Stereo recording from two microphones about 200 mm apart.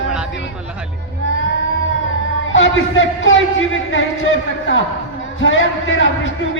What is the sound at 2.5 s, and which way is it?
Music, 70° left (ahead or behind).